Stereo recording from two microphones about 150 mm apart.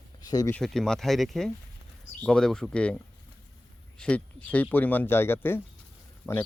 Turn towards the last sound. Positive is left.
turn(degrees=15)  # may be behind; listen again after turning